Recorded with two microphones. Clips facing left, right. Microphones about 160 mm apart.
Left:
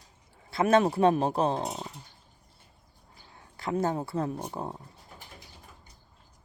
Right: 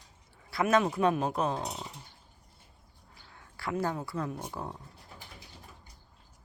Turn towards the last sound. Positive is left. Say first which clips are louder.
# left 3 dB
turn(degrees=25)  # may be behind; listen again after turning